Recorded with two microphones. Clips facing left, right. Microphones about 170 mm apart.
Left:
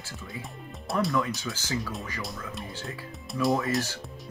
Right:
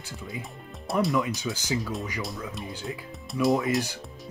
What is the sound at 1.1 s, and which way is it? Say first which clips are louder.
Speech: right 2 dB; 20° right (ahead or behind).